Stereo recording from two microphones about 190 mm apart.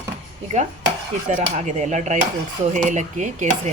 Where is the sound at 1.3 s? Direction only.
35° right (ahead or behind).